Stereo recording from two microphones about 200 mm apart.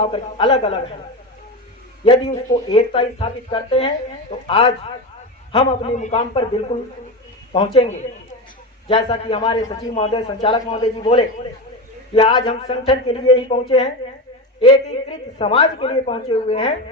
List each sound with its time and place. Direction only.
0.0 s speech: 25° left (ahead or behind)
2.0 s speech: 25° left (ahead or behind)
15.4 s speech: 25° left (ahead or behind)